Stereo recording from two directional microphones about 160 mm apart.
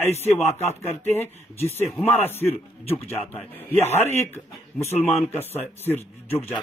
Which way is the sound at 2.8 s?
40° left (ahead or behind).